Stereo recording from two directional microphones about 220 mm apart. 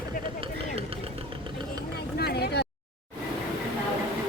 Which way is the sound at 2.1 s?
45° left (ahead or behind).